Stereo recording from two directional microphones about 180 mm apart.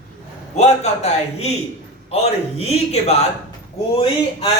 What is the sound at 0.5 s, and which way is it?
Speech, 40° left (ahead or behind).